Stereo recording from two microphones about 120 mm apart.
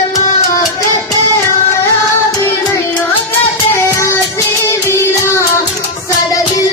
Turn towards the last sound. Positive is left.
turn(degrees=20)  # may be behind; listen again after turning